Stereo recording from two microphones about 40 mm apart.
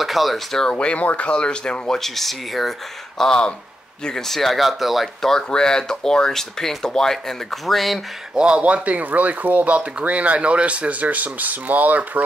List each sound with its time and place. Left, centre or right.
0.0 s speech: centre
0.7 s speech: left
2.0 s speech: centre
3.2 s speech: centre
4.3 s speech: centre
5.5 s speech: centre
8.4 s speech: right